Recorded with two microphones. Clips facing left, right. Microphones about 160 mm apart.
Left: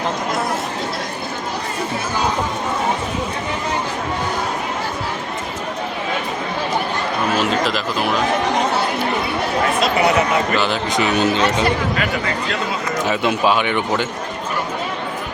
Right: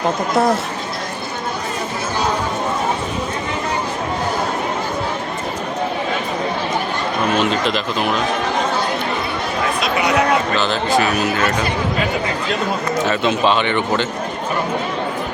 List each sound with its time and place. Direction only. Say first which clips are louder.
7.3 s speech: even; 5° left (ahead or behind)
10.6 s speech: right 2 dB; 15° left (ahead or behind)
13.1 s speech: even; 10° left (ahead or behind)